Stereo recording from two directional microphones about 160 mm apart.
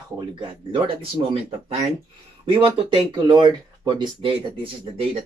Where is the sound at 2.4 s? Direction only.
30° right (ahead or behind).